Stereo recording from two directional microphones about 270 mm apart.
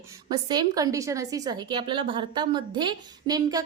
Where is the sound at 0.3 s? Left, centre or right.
Centre.